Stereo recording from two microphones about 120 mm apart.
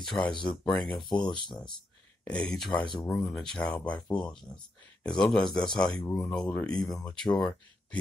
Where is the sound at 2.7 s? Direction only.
40° left (ahead or behind).